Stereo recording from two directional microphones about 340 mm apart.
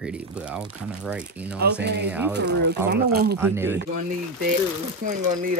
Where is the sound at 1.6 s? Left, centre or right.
Right.